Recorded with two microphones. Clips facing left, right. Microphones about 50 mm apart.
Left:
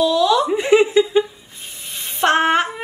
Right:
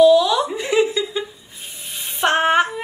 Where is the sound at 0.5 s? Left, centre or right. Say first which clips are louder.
Left 4 dB; left.